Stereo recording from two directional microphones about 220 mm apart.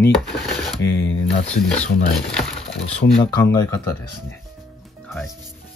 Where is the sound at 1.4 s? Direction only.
5° left (ahead or behind).